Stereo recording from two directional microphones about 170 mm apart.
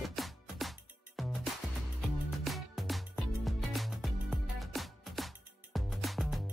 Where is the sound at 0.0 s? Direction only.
Centre (ahead or behind).